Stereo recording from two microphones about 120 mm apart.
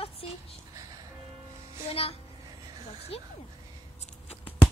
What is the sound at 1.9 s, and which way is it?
A woman's voice, 55° left (ahead or behind).